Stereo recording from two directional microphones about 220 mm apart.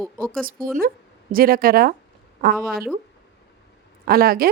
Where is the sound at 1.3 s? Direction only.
40° right (ahead or behind).